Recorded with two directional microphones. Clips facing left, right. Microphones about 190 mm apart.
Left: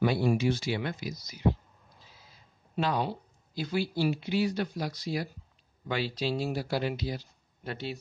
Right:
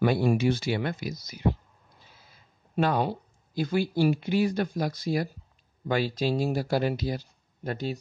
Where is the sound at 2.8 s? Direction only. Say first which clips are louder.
Right 4 dB; 50° right (ahead or behind).